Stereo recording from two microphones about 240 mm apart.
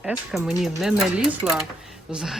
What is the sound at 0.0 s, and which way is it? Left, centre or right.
Speech, centre.